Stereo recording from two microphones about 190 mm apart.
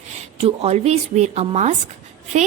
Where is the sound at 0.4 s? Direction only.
35° right (ahead or behind).